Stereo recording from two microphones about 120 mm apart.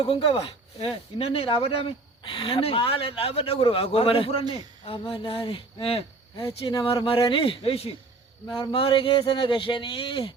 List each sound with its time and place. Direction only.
0.0 s speech: 45° left (ahead or behind)
8.4 s speech: 35° left (ahead or behind)